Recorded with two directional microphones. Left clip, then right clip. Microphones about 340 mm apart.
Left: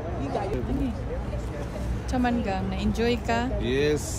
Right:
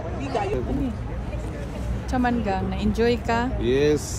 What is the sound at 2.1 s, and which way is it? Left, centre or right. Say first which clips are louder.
Speech: right 3 dB; centre.